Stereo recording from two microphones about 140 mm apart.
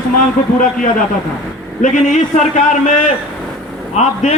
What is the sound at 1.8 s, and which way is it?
A man's voice, 60° left (ahead or behind).